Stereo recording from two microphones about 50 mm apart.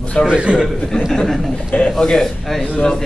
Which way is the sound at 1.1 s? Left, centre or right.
Centre.